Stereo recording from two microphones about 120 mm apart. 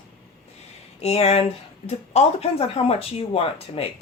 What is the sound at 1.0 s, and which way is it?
Speech, 60° left (ahead or behind).